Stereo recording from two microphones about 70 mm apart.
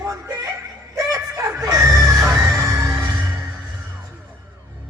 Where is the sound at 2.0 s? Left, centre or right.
Right.